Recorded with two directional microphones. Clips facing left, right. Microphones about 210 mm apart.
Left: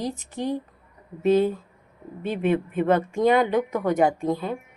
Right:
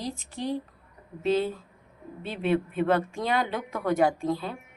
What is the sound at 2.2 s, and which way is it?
Speech, 45° left (ahead or behind).